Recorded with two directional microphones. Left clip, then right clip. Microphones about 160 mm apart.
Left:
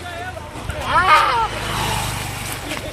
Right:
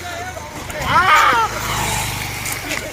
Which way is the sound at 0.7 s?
55° right (ahead or behind).